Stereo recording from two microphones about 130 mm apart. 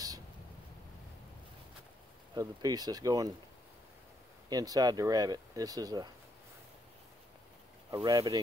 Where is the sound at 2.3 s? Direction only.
30° right (ahead or behind).